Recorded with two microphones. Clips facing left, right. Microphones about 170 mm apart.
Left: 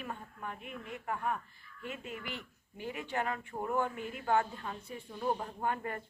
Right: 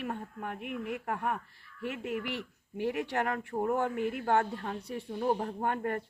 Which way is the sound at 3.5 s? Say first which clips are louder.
Right 6 dB; 50° right (ahead or behind).